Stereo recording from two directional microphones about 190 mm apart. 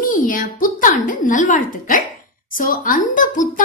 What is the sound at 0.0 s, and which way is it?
Speech, 45° left (ahead or behind).